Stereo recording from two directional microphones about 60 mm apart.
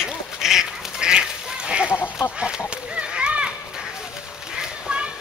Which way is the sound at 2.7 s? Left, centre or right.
Centre.